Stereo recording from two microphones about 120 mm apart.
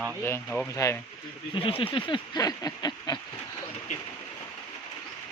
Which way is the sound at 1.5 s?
50° left (ahead or behind).